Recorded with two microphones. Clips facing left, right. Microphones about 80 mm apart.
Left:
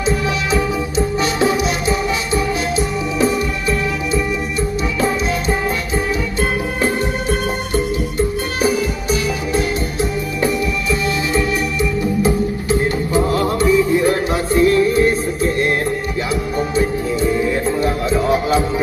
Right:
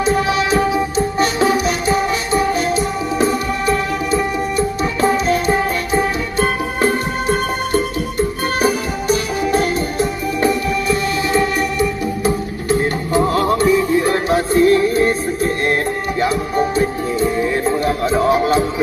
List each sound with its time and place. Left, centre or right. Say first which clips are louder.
0.0 s music: right 3 dB; right
6.8 s music: right 3 dB; right
13.1 s music: right 2 dB; right